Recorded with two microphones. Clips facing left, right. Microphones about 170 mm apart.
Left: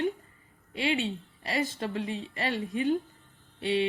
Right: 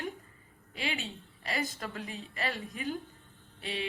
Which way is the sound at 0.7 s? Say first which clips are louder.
Left 8 dB; 30° left (ahead or behind).